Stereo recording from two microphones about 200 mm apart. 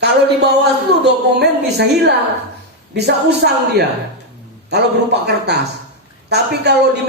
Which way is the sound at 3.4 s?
55° right (ahead or behind).